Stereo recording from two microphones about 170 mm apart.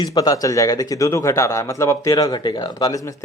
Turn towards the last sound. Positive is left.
turn(degrees=20)  # may be behind; listen again after turning